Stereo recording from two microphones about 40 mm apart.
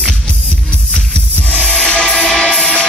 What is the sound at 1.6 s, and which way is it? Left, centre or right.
Music, left.